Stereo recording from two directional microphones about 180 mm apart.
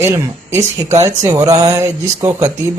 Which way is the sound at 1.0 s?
20° right (ahead or behind).